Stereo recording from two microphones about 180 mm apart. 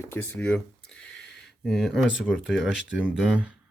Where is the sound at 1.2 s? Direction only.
70° left (ahead or behind).